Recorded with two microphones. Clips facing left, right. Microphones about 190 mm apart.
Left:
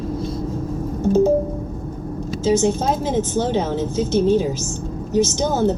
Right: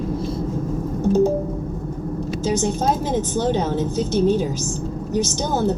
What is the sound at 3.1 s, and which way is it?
A woman's voice, 15° right (ahead or behind).